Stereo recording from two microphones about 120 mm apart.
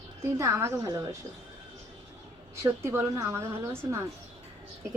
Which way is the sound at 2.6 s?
20° right (ahead or behind).